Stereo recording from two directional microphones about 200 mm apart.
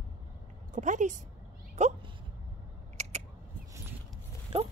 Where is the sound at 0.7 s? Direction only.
40° right (ahead or behind).